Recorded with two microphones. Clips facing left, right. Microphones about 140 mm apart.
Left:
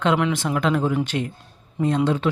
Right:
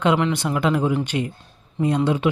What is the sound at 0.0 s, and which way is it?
Speech, centre (ahead or behind).